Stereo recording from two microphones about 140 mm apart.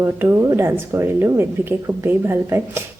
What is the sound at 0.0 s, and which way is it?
A woman's voice, 20° right (ahead or behind).